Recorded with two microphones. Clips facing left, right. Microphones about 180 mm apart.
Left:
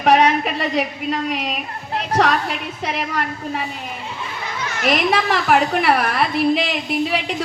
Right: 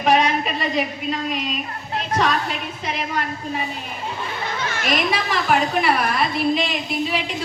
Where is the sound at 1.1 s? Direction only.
60° left (ahead or behind).